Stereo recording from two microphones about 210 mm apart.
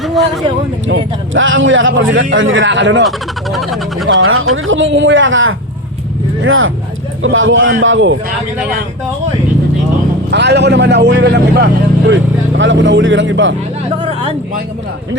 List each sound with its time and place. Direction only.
0.0 s a sound: centre (ahead or behind)
0.9 s a man's voice: 65° right (ahead or behind)
3.0 s speech: centre (ahead or behind)
4.1 s a man's voice: 75° right (ahead or behind)
10.3 s speech: 55° right (ahead or behind)
14.0 s a sound: 25° right (ahead or behind)